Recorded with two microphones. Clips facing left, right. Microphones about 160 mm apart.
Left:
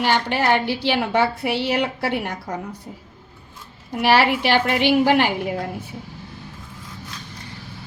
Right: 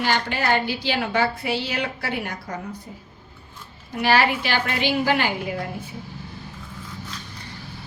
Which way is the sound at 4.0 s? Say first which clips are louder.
Left 3 dB; 65° left (ahead or behind).